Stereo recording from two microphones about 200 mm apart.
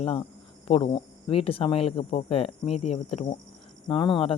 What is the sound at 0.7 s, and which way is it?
Speech, 30° left (ahead or behind).